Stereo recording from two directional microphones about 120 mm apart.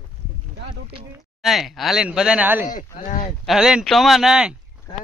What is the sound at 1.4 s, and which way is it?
Speech, centre (ahead or behind).